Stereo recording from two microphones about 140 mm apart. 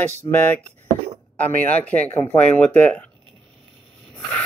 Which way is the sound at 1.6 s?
10° left (ahead or behind).